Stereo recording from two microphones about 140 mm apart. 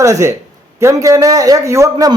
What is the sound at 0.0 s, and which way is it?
A man's voice, 20° right (ahead or behind).